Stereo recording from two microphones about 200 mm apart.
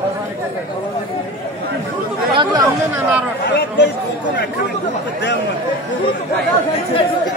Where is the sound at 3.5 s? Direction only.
55° left (ahead or behind).